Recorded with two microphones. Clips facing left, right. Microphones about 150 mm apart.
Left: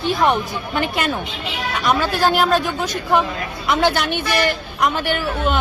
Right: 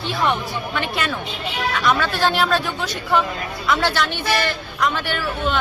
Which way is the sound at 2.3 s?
45° left (ahead or behind).